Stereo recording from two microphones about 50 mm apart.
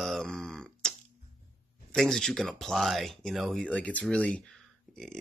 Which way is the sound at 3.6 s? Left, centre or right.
Left.